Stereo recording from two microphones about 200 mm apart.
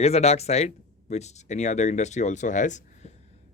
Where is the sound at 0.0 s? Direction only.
30° left (ahead or behind).